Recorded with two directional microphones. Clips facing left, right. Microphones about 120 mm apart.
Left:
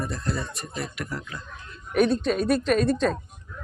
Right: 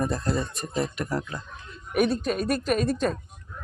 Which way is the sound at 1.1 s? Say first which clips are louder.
Right 5 dB; 35° right (ahead or behind).